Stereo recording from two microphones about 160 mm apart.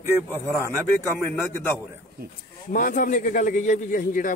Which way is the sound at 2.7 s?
60° left (ahead or behind).